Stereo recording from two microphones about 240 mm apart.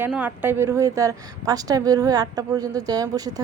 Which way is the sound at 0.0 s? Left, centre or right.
Centre.